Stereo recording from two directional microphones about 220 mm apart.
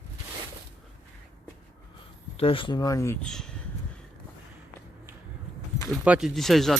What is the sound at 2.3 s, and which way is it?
Speech, 25° left (ahead or behind).